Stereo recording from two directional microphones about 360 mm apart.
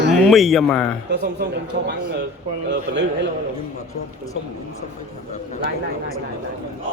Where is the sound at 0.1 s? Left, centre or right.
Centre.